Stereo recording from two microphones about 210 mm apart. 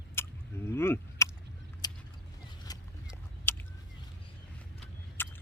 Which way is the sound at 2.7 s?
20° left (ahead or behind).